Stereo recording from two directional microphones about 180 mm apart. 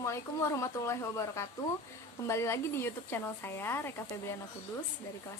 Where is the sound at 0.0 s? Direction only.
15° left (ahead or behind).